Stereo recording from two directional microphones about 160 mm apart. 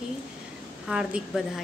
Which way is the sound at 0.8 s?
5° right (ahead or behind).